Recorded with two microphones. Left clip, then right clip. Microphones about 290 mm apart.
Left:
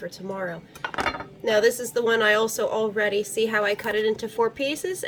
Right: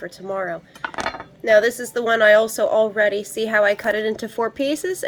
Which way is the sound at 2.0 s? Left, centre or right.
Centre.